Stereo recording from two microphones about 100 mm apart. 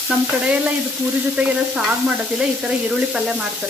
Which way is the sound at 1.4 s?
15° right (ahead or behind).